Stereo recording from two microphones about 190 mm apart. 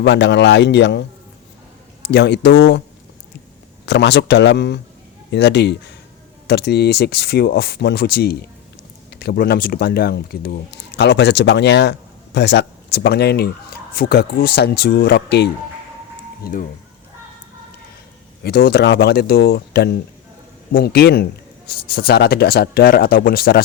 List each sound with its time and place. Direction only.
0.0 s speech: 65° left (ahead or behind)
2.0 s speech: 65° left (ahead or behind)
3.8 s speech: 65° left (ahead or behind)
16.4 s speech: 45° left (ahead or behind)
18.4 s speech: 60° left (ahead or behind)